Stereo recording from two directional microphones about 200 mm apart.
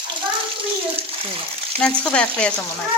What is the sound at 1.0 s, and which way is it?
Water, 30° right (ahead or behind).